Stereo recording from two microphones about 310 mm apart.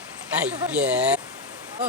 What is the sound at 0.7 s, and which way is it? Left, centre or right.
Speech, centre.